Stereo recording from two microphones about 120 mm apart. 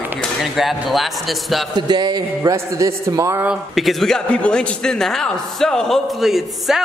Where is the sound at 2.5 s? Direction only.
25° right (ahead or behind).